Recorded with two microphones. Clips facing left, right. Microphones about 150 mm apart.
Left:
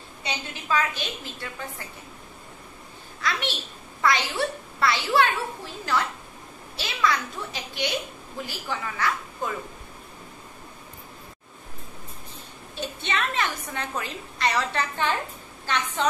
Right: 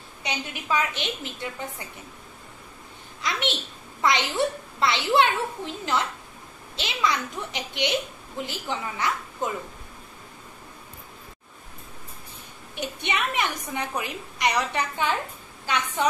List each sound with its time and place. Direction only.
0.2 s a child's voice: 15° right (ahead or behind)
3.2 s a child's voice: 20° right (ahead or behind)
12.7 s a woman's voice: 15° right (ahead or behind)